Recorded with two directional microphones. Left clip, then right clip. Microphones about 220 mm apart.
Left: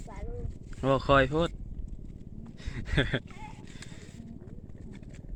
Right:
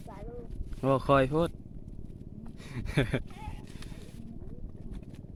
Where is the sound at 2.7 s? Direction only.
10° right (ahead or behind).